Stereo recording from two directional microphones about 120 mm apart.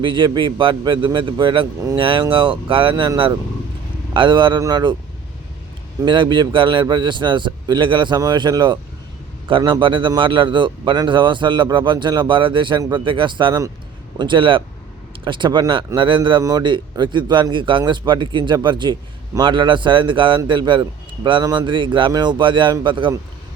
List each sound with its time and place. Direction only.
0.0 s a man's voice: 40° right (ahead or behind)
4.1 s a man's voice: 40° right (ahead or behind)
6.0 s a man's voice: 40° right (ahead or behind)
16.0 s a man's voice: 45° right (ahead or behind)